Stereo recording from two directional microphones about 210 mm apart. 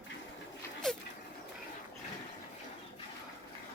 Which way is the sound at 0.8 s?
5° left (ahead or behind).